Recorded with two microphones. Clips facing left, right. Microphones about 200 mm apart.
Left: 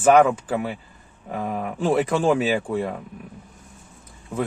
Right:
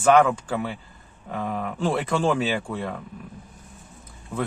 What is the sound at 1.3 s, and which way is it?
Speech, 10° left (ahead or behind).